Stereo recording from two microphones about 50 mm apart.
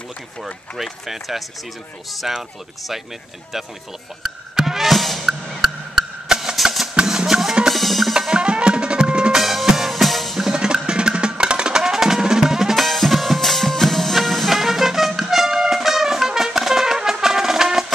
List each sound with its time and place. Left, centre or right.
0.7 s speech: centre
4.2 s music: centre
7.7 s percussion: centre
8.1 s music: centre
9.4 s music: centre
10.4 s music: centre
12.8 s music: centre